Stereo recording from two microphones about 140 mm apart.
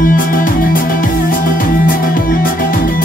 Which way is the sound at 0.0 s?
90° left.